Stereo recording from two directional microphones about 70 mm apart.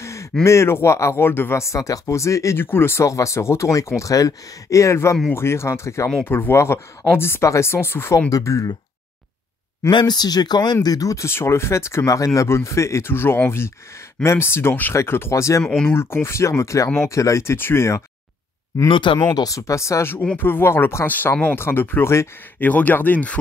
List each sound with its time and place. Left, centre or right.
0.0 s a sound: left
0.4 s speech: left
2.6 s speech: left
8.3 s speech: left
9.8 s speech: left
11.2 s speech: left
19.3 s speech: left
20.3 s speech: left
22.6 s speech: left